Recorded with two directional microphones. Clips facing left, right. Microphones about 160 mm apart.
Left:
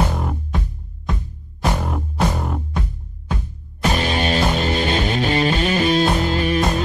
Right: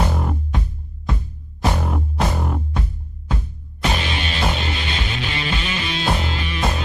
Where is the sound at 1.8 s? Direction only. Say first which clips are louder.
Left 1 dB; centre (ahead or behind).